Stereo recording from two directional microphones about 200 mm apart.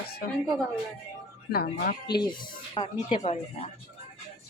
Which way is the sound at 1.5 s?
50° left (ahead or behind).